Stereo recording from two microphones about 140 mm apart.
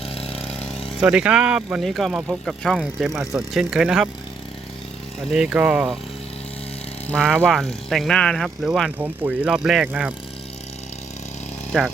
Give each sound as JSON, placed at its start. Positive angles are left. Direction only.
{"t": 0.1, "sound": "vehicle", "side_deg": 45}
{"t": 0.6, "sound": "speech", "side_deg": 5}
{"t": 5.3, "sound": "speech", "side_deg": -5}
{"t": 7.1, "sound": "speech", "side_deg": 5}